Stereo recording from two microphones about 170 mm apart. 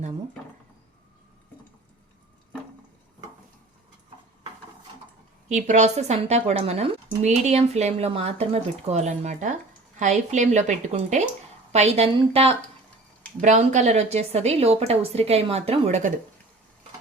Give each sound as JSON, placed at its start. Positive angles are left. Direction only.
{"t": 5.5, "sound": "a woman's voice", "side_deg": -45}